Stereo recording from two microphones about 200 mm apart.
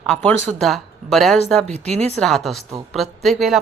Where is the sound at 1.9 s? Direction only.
30° right (ahead or behind).